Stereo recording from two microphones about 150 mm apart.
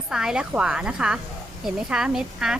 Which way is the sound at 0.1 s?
5° right (ahead or behind).